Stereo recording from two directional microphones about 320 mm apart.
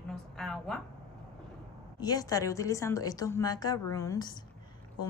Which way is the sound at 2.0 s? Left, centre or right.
Centre.